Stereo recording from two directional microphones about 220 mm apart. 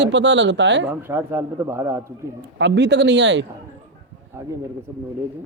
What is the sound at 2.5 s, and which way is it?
Speech, 55° right (ahead or behind).